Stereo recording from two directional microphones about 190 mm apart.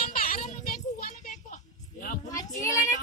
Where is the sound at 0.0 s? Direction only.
50° left (ahead or behind).